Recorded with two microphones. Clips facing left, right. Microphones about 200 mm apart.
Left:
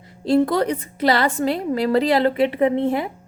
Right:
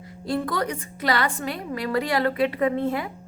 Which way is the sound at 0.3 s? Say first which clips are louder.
Left 8 dB; 25° left (ahead or behind).